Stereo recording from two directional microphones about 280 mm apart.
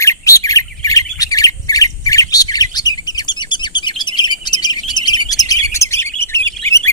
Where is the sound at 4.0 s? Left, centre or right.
Centre.